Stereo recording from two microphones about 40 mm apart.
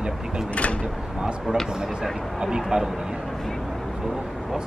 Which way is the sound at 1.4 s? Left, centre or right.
Centre.